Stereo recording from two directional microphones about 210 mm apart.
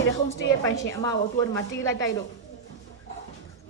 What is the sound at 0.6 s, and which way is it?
Speech, 15° left (ahead or behind).